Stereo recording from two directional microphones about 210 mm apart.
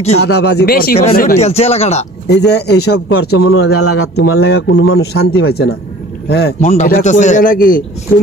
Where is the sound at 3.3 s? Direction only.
90° left.